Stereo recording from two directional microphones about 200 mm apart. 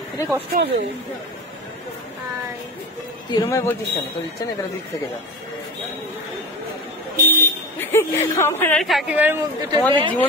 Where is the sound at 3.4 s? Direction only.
15° left (ahead or behind).